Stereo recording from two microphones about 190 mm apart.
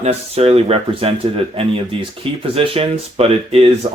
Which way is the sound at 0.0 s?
35° right (ahead or behind).